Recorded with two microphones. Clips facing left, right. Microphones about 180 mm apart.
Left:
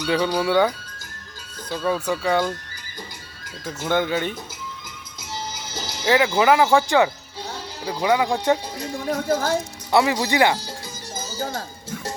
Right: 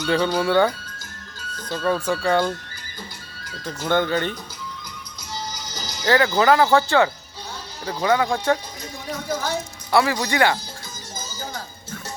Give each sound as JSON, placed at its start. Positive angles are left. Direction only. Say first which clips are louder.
{"t": 0.0, "sound": "speech", "louder": "right 1 dB", "side_deg": 10}
{"t": 3.8, "sound": "speech", "louder": "right 1 dB", "side_deg": 5}
{"t": 5.3, "sound": "music", "louder": "left 1 dB", "side_deg": 25}
{"t": 6.1, "sound": "speech", "louder": "even", "side_deg": 10}
{"t": 9.9, "sound": "speech", "louder": "left 1 dB", "side_deg": 20}